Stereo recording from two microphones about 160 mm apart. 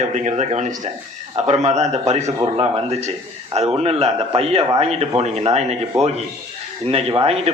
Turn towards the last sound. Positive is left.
turn(degrees=-40)  # may be behind; listen again after turning